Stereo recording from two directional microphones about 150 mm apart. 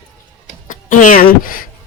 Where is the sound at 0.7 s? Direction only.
60° left (ahead or behind).